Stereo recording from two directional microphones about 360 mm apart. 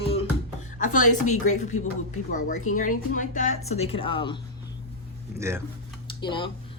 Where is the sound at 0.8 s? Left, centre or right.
Left.